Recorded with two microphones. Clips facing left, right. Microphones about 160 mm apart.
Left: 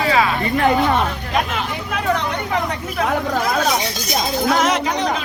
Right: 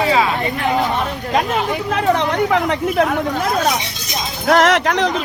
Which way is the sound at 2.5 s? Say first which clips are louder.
Right 6 dB; 90° right.